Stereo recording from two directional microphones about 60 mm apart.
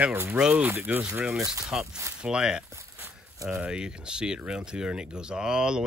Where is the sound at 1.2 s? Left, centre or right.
Centre.